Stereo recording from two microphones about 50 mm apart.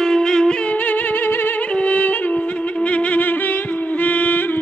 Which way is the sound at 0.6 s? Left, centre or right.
Left.